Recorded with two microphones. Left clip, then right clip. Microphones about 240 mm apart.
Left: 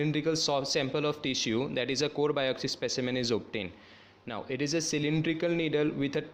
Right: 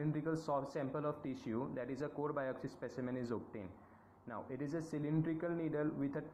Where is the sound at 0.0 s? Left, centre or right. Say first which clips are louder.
Left 11 dB; left.